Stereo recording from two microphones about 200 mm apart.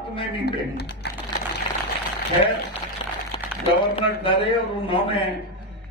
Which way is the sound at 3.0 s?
25° left (ahead or behind).